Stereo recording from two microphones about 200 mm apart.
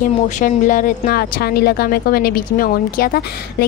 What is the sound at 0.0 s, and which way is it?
A woman's voice, 40° left (ahead or behind).